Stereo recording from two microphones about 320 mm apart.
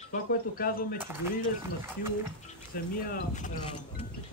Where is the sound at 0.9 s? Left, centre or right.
Centre.